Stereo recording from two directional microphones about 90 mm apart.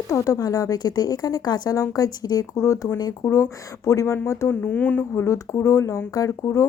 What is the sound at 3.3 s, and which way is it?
Speech, 30° left (ahead or behind).